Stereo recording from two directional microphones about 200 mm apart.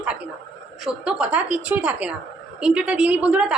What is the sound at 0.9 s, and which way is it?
A woman's voice, 5° right (ahead or behind).